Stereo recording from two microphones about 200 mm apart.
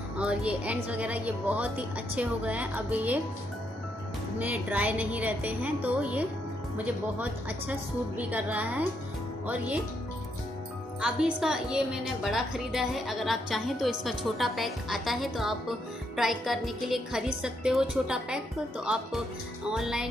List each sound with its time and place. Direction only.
0.2 s a woman's voice: 5° right (ahead or behind)
4.4 s a woman's voice: 5° right (ahead or behind)
11.0 s a woman's voice: 5° right (ahead or behind)
19.7 s a woman's voice: centre (ahead or behind)